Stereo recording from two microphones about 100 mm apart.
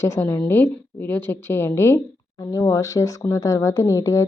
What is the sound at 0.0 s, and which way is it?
A woman's voice, 25° left (ahead or behind).